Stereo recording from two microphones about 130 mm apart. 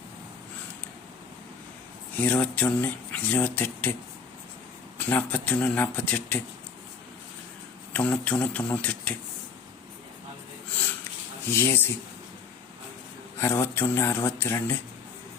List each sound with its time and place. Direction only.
2.1 s speech: 15° left (ahead or behind)
4.9 s speech: 15° left (ahead or behind)
7.9 s speech: 10° left (ahead or behind)
11.4 s speech: 15° left (ahead or behind)
13.4 s speech: 20° left (ahead or behind)